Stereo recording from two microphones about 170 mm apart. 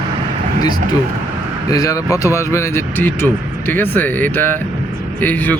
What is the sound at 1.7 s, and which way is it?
Speech, 20° left (ahead or behind).